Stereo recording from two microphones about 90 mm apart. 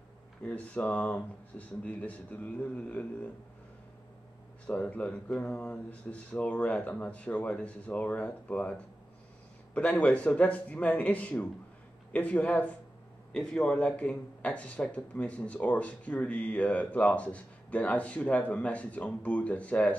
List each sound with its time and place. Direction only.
0.5 s speech: 15° left (ahead or behind)
4.6 s speech: 15° left (ahead or behind)